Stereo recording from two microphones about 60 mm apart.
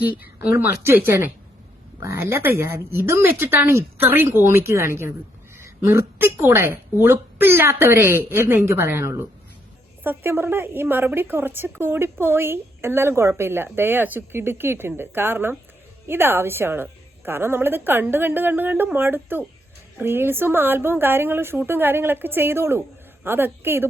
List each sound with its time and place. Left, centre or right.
2.0 s a woman's voice: right